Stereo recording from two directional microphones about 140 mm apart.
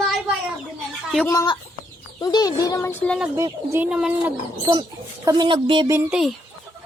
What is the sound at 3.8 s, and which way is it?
Speech, 5° right (ahead or behind).